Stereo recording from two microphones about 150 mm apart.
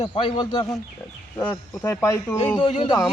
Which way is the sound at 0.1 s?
30° left (ahead or behind).